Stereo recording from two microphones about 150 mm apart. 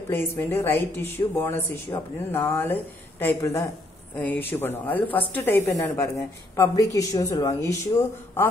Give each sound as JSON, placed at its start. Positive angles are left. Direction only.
{"t": 0.1, "sound": "a woman's voice", "side_deg": 15}